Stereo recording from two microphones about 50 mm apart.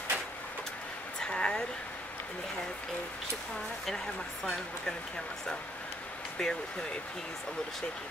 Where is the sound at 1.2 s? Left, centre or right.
Centre.